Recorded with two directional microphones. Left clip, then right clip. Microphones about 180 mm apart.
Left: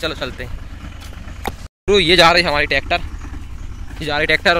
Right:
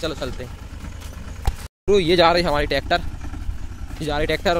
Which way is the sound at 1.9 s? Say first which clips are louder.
Left 4 dB; 10° right (ahead or behind).